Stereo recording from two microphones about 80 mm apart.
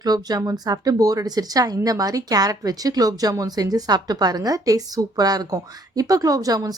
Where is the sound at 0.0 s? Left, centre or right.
Right.